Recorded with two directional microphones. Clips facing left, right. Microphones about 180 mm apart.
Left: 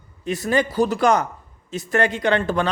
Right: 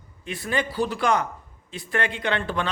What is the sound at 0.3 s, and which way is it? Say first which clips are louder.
A man's voice: left 6 dB; 40° left (ahead or behind).